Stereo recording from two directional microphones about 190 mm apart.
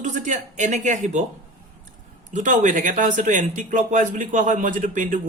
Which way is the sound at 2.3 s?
40° right (ahead or behind).